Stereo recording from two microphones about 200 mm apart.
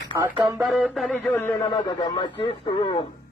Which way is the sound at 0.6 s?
Centre (ahead or behind).